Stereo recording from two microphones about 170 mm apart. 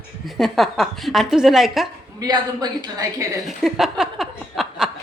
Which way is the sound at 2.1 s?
25° right (ahead or behind).